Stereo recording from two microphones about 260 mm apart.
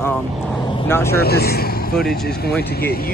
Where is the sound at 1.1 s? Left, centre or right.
Left.